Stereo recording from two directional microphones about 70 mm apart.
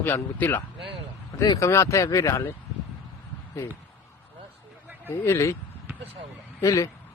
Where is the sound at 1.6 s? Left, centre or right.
Left.